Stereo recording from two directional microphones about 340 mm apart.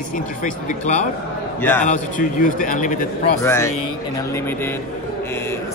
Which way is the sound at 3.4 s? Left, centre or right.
Centre.